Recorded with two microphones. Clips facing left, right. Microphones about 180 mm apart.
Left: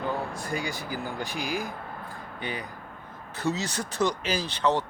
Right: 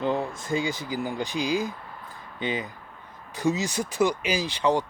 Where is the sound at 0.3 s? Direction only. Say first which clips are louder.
Right 4 dB; 20° right (ahead or behind).